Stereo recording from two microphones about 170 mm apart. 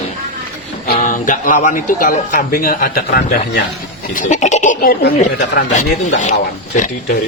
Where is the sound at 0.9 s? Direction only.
50° left (ahead or behind); by 3.6 s 65° left (ahead or behind).